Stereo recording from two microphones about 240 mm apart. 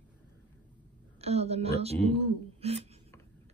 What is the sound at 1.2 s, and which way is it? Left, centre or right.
Speech, right.